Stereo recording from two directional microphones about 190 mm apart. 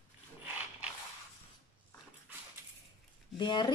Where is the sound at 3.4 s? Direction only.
25° left (ahead or behind).